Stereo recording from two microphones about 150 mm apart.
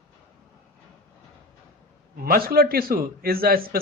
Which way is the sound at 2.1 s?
80° right.